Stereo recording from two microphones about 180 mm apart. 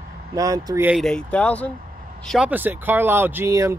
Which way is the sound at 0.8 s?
Centre (ahead or behind).